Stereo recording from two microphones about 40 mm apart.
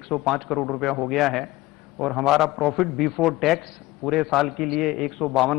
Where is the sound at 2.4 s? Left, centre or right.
Centre.